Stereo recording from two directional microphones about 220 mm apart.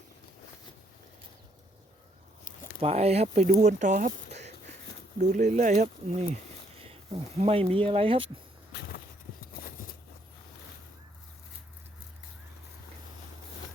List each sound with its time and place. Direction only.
2.8 s speech: 30° right (ahead or behind)
5.2 s speech: 30° right (ahead or behind)
9.6 s a sound: 40° left (ahead or behind)